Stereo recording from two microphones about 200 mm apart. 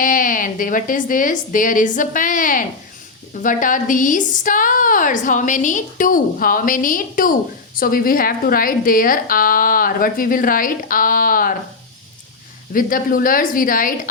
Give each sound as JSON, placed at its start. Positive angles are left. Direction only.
{"t": 0.0, "sound": "a woman's voice", "side_deg": 40}
{"t": 12.7, "sound": "speech", "side_deg": 45}